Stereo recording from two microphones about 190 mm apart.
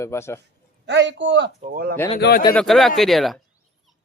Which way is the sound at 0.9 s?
70° right (ahead or behind).